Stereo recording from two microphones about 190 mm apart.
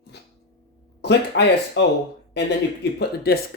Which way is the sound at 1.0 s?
65° left (ahead or behind).